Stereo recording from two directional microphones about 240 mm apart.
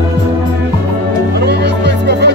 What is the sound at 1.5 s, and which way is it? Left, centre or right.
Music, right.